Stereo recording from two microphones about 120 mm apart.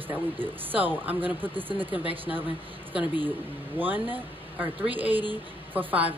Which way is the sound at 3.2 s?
15° right (ahead or behind).